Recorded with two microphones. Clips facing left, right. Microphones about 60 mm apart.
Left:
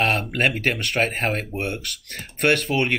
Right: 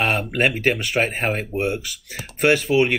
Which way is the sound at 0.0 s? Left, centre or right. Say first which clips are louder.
Right 1 dB; centre.